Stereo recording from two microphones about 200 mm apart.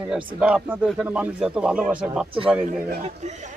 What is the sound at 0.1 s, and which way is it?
Speech, 5° right (ahead or behind).